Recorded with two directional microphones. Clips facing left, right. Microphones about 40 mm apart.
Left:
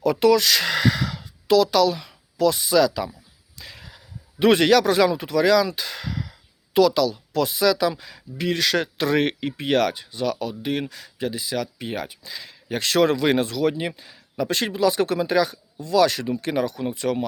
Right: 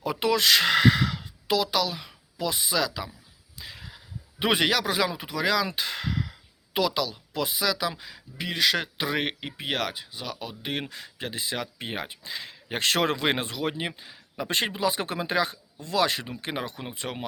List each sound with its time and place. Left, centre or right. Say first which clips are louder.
0.0 s speech: left 7 dB; centre
5.6 s speech: left 1 dB; right
10.6 s speech: left 6 dB; right